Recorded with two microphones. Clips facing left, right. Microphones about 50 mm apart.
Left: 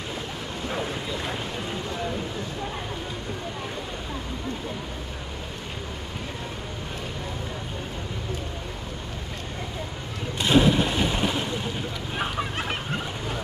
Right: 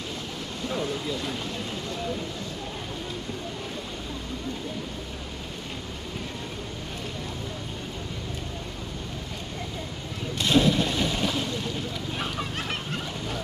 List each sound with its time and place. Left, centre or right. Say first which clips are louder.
0.7 s vehicle: right 1 dB; left
10.4 s boat: left 2 dB; centre